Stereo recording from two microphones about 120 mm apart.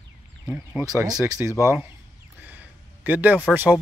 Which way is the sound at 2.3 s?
15° right (ahead or behind).